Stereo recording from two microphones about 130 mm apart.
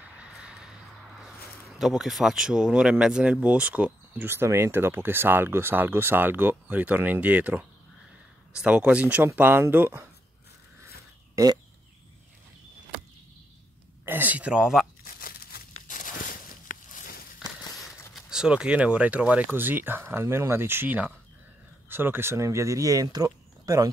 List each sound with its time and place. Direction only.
0.2 s a sound: 5° right (ahead or behind)
1.2 s speech: 5° right (ahead or behind)
14.0 s speech: 15° right (ahead or behind)
15.0 s crumpling: 90° left
15.9 s a sound: 85° left
17.8 s speech: 5° right (ahead or behind); by 23.9 s 25° right (ahead or behind)